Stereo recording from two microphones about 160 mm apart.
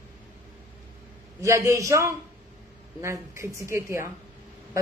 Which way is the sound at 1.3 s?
20° right (ahead or behind).